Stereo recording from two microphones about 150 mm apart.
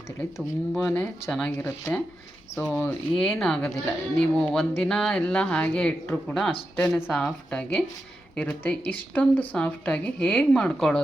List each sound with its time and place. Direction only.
0.2 s speech: 10° left (ahead or behind)